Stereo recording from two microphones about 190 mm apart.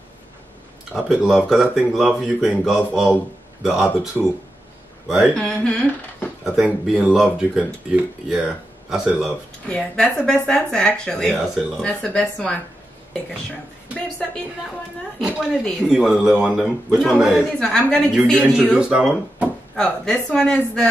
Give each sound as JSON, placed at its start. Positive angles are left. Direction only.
{"t": 0.9, "sound": "speech", "side_deg": 0}
{"t": 15.1, "sound": "speech", "side_deg": 0}